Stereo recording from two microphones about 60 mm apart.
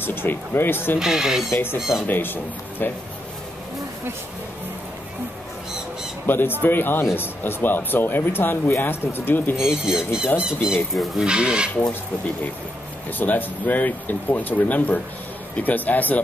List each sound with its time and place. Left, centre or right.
0.0 s speech: left
0.9 s speech: centre
1.5 s speech: left
1.8 s speech: centre
2.0 s speech: left
6.2 s speech: left
9.6 s speech: centre
13.2 s speech: left
15.5 s speech: left